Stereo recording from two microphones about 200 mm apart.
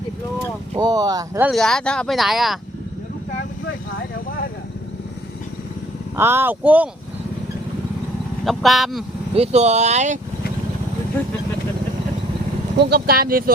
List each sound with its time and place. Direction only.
0.8 s speech: 20° right (ahead or behind)
1.5 s speech: centre (ahead or behind)
6.1 s speech: 10° right (ahead or behind)
8.4 s speech: centre (ahead or behind)
9.3 s speech: 30° right (ahead or behind)
12.7 s speech: 55° right (ahead or behind)